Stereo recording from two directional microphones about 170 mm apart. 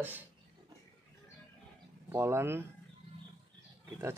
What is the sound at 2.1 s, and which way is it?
Speech, 15° right (ahead or behind).